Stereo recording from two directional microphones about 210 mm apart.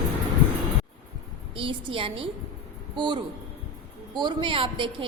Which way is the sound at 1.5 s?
25° right (ahead or behind).